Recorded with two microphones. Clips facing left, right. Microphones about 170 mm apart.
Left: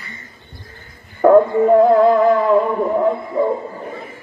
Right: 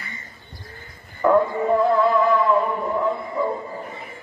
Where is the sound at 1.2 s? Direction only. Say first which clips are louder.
Left 7 dB; 50° left (ahead or behind).